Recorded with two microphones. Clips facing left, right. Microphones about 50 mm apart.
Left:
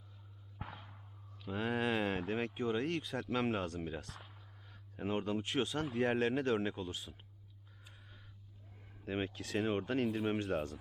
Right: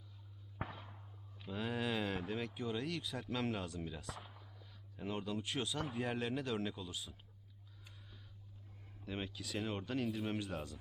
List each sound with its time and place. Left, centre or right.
1.5 s speech: left
9.0 s speech: left
9.3 s speech: left
9.6 s speech: left